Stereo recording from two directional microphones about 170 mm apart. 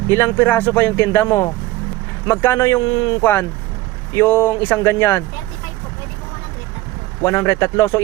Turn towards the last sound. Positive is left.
turn(degrees=20)  # may be behind; listen again after turning